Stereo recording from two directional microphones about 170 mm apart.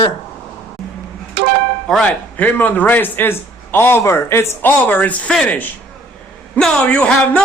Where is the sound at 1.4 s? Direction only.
85° right.